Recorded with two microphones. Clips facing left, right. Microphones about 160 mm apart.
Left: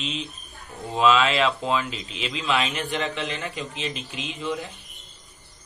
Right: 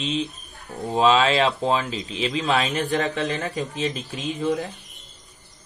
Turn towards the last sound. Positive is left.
turn(degrees=-45)  # may be behind; listen again after turning